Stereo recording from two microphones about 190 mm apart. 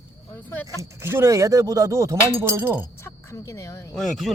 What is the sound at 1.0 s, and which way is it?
Speech, 15° right (ahead or behind).